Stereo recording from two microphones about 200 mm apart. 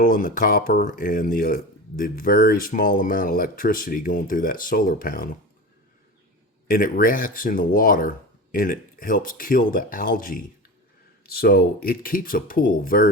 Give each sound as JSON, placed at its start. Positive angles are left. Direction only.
{"t": 0.0, "sound": "speech", "side_deg": 40}
{"t": 6.7, "sound": "speech", "side_deg": 45}